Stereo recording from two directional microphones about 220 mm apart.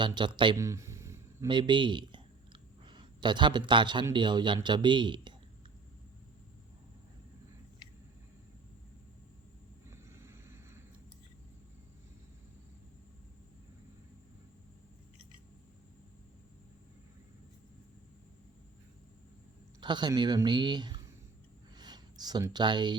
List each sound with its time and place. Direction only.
0.0 s speech: 20° right (ahead or behind)
9.9 s vehicle: 10° right (ahead or behind)
19.8 s speech: 20° right (ahead or behind)
21.8 s a sound: 20° right (ahead or behind)